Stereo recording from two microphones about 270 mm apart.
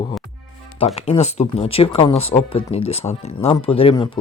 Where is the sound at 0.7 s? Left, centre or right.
Left.